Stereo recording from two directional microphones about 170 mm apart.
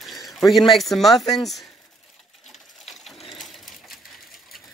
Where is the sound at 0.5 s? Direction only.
Centre (ahead or behind).